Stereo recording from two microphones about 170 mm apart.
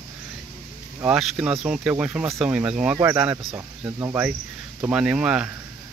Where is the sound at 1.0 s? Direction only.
5° right (ahead or behind).